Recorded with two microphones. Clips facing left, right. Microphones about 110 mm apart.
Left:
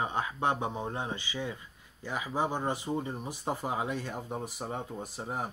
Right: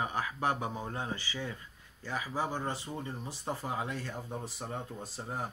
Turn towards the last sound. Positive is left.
turn(degrees=15)  # may be behind; listen again after turning